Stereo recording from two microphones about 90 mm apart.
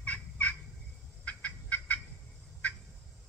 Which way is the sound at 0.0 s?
15° left (ahead or behind).